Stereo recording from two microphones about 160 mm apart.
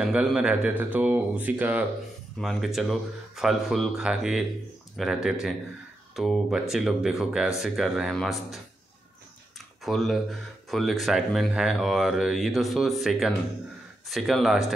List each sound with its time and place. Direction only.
0.0 s speech: 5° right (ahead or behind)
9.8 s speech: centre (ahead or behind)